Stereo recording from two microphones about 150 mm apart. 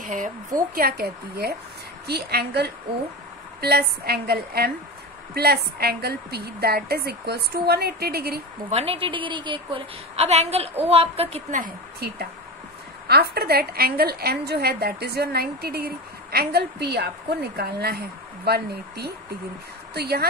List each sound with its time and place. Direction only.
0.0 s a woman's voice: 60° right (ahead or behind)
0.7 s a woman's voice: 90° right
8.6 s a woman's voice: 40° right (ahead or behind)
13.1 s a woman's voice: 90° right